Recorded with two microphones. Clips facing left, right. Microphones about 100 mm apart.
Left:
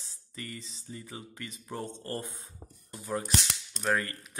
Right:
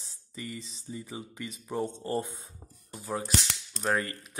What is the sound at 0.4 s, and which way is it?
Speech, 15° right (ahead or behind).